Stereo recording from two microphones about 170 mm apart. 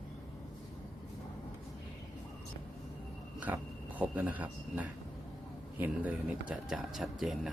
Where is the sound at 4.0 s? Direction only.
10° right (ahead or behind).